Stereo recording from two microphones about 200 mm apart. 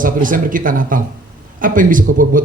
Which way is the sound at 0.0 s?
40° right (ahead or behind).